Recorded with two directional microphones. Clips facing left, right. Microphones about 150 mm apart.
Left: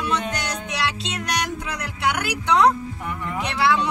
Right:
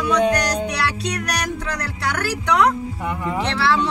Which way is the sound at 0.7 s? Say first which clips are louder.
Right 3 dB; 25° left (ahead or behind).